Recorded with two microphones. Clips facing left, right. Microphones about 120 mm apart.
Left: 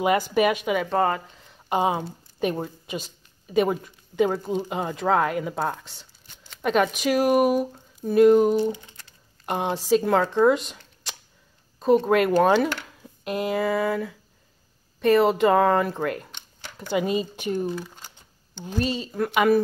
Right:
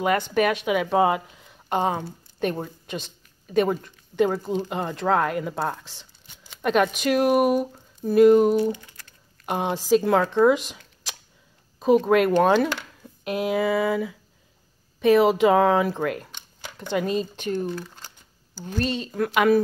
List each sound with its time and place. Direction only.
0.0 s a woman's voice: 5° left (ahead or behind)
8.7 s a sound: 20° left (ahead or behind)
9.5 s a woman's voice: centre (ahead or behind)